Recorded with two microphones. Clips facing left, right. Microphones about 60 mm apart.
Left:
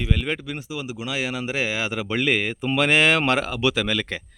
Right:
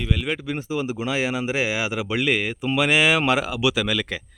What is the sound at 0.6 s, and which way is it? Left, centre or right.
Speech, right.